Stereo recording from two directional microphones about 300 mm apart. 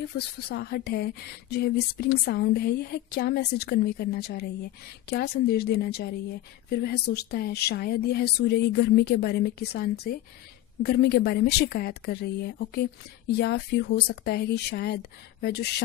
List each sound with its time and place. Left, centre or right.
0.1 s speech: left